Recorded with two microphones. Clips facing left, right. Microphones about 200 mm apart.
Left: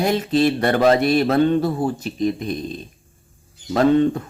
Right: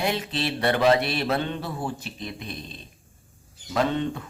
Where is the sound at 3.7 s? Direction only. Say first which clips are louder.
Left 9 dB; 45° left (ahead or behind).